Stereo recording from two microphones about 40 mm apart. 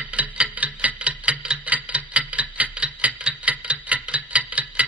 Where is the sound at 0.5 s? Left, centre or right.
Right.